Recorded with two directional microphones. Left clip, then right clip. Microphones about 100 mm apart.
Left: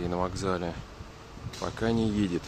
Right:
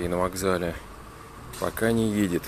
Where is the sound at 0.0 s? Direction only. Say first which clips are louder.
Right 5 dB; centre (ahead or behind).